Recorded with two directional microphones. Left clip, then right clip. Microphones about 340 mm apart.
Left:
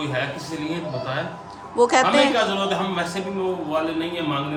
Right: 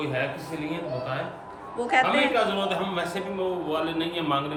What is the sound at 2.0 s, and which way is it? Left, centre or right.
Speech, centre.